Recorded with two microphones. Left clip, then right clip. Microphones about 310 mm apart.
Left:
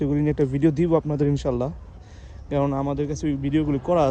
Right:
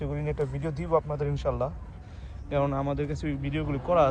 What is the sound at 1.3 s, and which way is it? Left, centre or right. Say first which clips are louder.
Speech: left 4 dB; centre.